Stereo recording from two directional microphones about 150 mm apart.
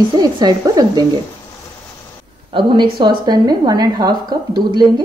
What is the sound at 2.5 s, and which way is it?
A woman's voice, 30° right (ahead or behind).